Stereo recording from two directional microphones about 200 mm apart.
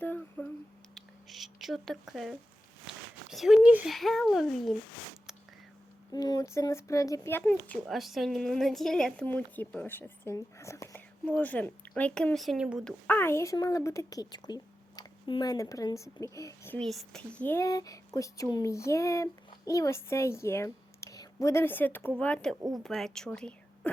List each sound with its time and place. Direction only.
0.0 s a sound: 10° left (ahead or behind)
2.8 s speech: centre (ahead or behind)
6.1 s a woman's voice: 20° left (ahead or behind)
7.5 s a woman's voice: centre (ahead or behind)
13.1 s a woman's voice: 10° left (ahead or behind)